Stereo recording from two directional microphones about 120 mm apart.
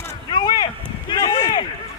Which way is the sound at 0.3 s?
35° left (ahead or behind).